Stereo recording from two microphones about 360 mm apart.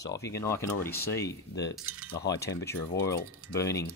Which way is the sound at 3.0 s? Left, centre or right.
Centre.